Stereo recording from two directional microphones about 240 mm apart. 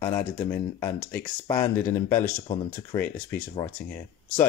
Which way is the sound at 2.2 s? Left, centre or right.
Left.